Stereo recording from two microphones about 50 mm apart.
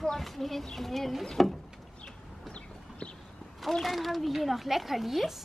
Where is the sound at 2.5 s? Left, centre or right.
Left.